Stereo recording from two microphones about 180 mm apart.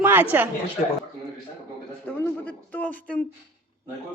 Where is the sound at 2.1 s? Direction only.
10° left (ahead or behind).